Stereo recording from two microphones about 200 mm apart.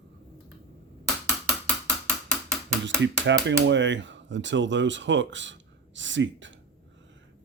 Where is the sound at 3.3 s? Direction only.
65° right (ahead or behind).